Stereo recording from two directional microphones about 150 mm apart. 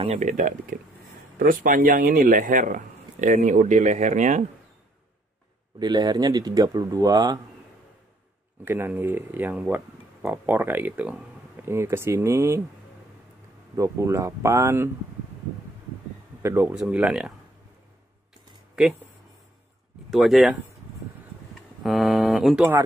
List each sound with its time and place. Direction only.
0.2 s speech: 55° right (ahead or behind)
5.8 s speech: 30° right (ahead or behind)
8.6 s speech: 15° right (ahead or behind)
13.7 s speech: 20° right (ahead or behind)
16.4 s speech: 10° right (ahead or behind)
18.8 s speech: 5° right (ahead or behind)
20.1 s speech: centre (ahead or behind)
21.8 s speech: centre (ahead or behind)